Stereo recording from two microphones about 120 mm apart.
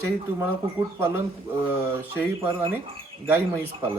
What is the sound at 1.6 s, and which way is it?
Speech, 15° right (ahead or behind).